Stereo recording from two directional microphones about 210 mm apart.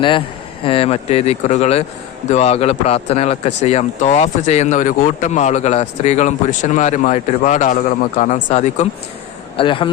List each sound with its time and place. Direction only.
0.6 s speech: 25° left (ahead or behind)